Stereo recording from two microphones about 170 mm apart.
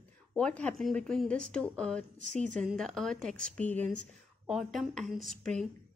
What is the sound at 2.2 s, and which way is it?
Speech, 45° right (ahead or behind).